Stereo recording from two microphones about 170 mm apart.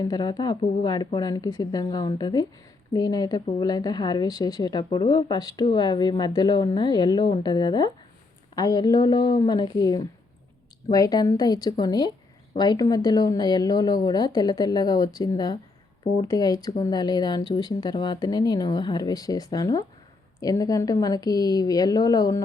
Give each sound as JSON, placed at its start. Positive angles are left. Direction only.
{"t": 0.0, "sound": "speech", "side_deg": 25}